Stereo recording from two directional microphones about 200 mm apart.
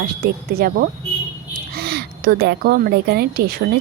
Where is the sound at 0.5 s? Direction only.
50° right (ahead or behind).